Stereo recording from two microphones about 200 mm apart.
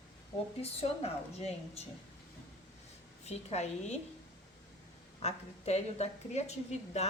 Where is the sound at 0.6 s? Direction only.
30° left (ahead or behind).